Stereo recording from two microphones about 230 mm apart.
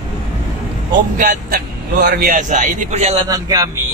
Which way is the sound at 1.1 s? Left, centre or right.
Right.